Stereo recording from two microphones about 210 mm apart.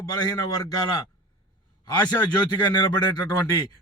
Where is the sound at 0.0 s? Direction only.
15° left (ahead or behind).